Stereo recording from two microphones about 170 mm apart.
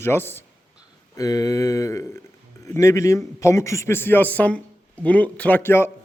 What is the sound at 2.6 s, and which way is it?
A man's voice, 15° left (ahead or behind).